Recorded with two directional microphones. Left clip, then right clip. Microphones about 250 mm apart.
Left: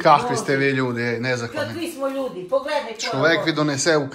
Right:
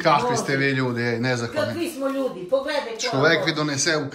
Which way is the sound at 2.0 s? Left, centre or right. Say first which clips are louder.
Left 2 dB; centre.